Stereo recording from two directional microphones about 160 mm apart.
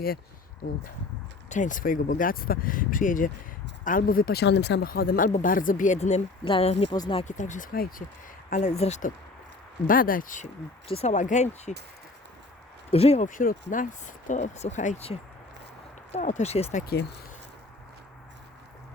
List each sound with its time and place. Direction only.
1.5 s speech: 50° left (ahead or behind)
6.9 s speech: 25° left (ahead or behind)
7.2 s speech: 50° left (ahead or behind)
8.7 s speech: 45° left (ahead or behind)
9.8 s speech: 60° left (ahead or behind)
10.8 s speech: 40° left (ahead or behind)
12.9 s speech: 40° left (ahead or behind)
16.1 s speech: 45° left (ahead or behind)
16.8 s speech: 90° left